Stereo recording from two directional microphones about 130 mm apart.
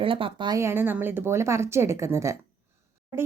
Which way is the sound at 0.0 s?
45° right (ahead or behind).